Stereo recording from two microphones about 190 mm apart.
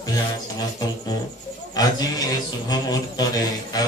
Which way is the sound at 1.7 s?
20° left (ahead or behind).